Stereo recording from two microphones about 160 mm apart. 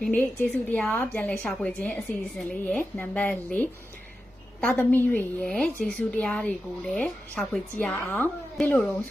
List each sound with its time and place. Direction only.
0.0 s a woman's voice: 10° left (ahead or behind)